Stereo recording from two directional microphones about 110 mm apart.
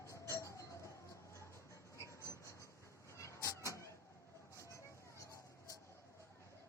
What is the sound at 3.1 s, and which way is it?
Vehicle, 25° left (ahead or behind).